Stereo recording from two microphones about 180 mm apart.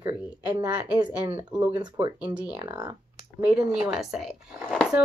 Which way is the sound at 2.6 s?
25° right (ahead or behind).